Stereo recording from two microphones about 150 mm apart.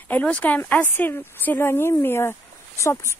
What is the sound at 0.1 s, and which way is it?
Speech, 10° left (ahead or behind).